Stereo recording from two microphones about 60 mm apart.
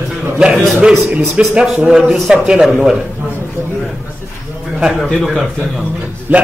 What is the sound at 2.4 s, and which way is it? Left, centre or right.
Speech, centre.